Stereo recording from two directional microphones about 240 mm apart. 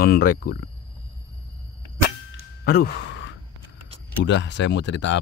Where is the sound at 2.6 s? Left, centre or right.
Left.